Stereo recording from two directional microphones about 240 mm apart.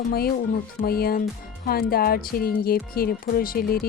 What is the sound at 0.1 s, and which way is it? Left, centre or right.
Speech, left.